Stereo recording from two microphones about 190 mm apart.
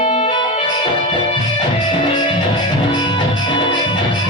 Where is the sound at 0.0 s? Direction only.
30° left (ahead or behind).